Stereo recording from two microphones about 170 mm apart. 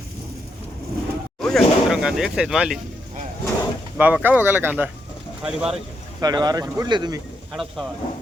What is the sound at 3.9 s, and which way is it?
Speech, 10° right (ahead or behind).